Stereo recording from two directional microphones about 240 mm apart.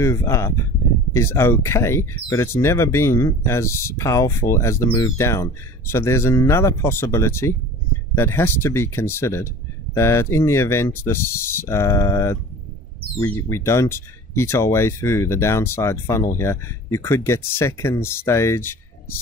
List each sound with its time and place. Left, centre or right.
0.0 s speech: centre